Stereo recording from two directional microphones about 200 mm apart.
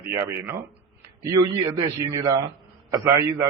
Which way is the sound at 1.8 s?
15° right (ahead or behind).